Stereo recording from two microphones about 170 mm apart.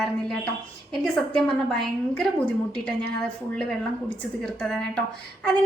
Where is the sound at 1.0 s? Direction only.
5° left (ahead or behind).